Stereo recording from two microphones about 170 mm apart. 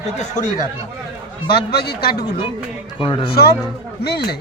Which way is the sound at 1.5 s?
65° left (ahead or behind).